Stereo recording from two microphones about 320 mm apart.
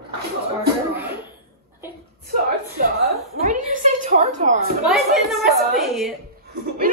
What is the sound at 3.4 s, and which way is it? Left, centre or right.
A woman's voice, right.